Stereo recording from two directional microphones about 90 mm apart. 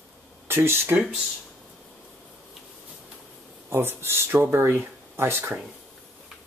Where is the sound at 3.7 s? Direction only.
25° right (ahead or behind).